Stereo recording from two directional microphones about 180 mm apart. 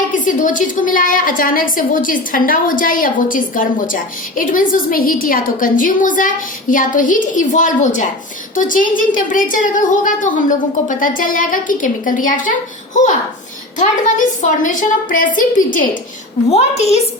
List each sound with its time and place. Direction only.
0.1 s a woman's voice: 45° left (ahead or behind)
16.5 s a woman's voice: 35° left (ahead or behind)